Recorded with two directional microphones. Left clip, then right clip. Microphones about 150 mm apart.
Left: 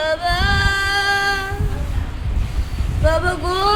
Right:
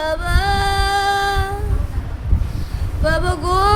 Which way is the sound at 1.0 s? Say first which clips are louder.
Even; 55° right (ahead or behind).